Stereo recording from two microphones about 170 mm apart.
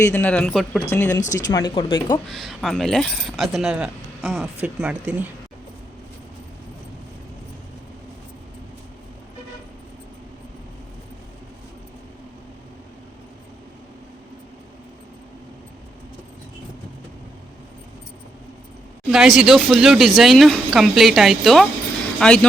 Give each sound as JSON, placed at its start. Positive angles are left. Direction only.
{"t": 0.0, "sound": "speech", "side_deg": 10}
{"t": 0.9, "sound": "speech", "side_deg": 15}
{"t": 1.5, "sound": "speech", "side_deg": 25}
{"t": 2.2, "sound": "speech", "side_deg": 0}
{"t": 19.1, "sound": "speech", "side_deg": -5}